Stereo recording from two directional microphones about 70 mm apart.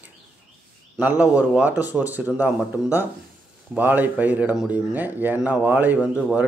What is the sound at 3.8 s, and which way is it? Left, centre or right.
Speech, right.